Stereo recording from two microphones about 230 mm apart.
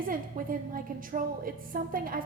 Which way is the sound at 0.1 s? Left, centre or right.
Right.